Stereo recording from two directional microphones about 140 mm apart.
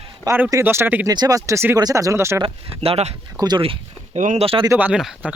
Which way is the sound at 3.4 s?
30° right (ahead or behind).